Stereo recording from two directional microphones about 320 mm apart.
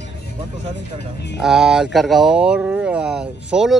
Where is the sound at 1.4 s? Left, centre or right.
Centre.